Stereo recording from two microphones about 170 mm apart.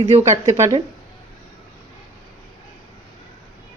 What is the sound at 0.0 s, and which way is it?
Speech, 40° right (ahead or behind).